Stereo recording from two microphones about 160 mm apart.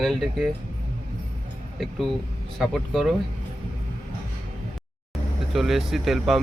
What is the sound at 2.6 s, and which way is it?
Speech, centre (ahead or behind).